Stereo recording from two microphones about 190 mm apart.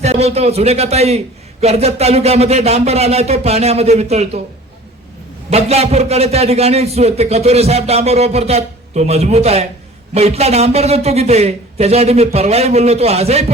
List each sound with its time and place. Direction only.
0.0 s a man's voice: 35° right (ahead or behind)
5.5 s a man's voice: 35° right (ahead or behind)